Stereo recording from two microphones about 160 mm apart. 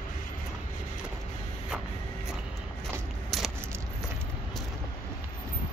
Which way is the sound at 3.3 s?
Centre (ahead or behind).